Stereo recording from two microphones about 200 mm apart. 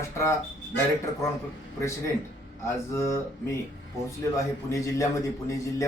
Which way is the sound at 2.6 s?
15° left (ahead or behind).